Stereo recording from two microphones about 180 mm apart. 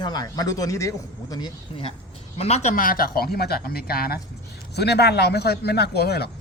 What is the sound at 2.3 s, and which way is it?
Speech, 35° left (ahead or behind).